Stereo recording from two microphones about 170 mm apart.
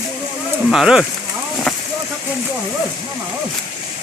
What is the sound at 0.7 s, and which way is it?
Speech, centre (ahead or behind).